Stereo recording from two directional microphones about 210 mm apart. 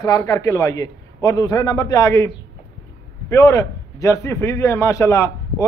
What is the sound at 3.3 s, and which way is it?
A man's voice, 15° left (ahead or behind).